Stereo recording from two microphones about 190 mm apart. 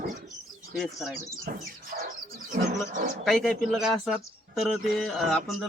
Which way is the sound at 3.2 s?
5° left (ahead or behind).